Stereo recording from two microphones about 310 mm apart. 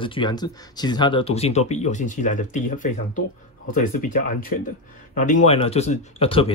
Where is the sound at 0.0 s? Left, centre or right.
Centre.